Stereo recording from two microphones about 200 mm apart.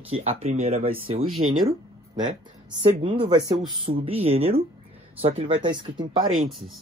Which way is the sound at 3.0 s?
25° right (ahead or behind).